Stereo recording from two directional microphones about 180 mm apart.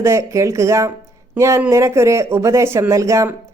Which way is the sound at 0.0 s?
15° right (ahead or behind).